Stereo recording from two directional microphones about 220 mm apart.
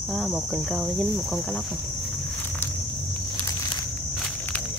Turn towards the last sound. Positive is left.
turn(degrees=5)  # may be behind; listen again after turning